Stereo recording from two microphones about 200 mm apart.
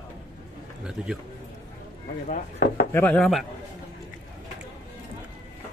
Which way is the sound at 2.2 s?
40° left (ahead or behind).